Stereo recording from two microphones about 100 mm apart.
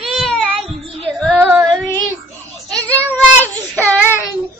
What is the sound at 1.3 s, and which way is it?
Female singing, 20° right (ahead or behind).